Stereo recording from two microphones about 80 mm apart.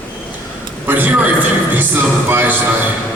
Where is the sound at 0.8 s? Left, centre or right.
Right.